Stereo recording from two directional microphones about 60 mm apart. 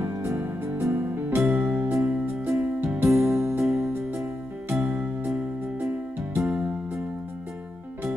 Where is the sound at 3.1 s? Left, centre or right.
Right.